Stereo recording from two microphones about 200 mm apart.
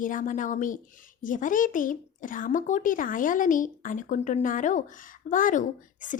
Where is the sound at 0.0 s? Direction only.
40° left (ahead or behind).